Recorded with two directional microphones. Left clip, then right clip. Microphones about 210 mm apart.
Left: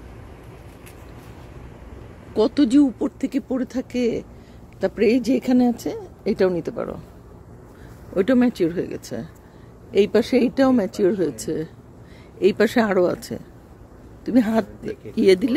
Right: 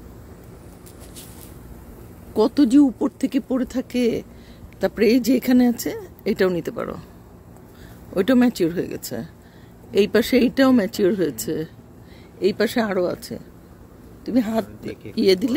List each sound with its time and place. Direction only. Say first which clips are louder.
2.3 s speech: right 1 dB; 15° right (ahead or behind)
8.1 s speech: even; centre (ahead or behind)
12.4 s speech: left 3 dB; 15° left (ahead or behind)